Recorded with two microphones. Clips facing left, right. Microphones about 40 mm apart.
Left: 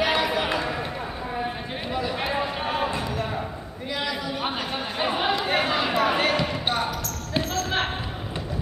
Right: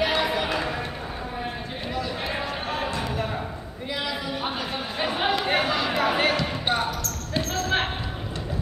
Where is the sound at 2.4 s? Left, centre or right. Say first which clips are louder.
Left 2 dB; centre.